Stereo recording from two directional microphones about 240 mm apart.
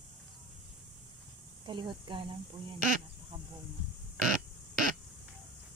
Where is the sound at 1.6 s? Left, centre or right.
Centre.